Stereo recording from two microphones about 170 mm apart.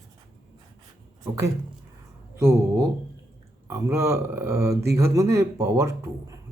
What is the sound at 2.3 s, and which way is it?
Speech, 15° right (ahead or behind).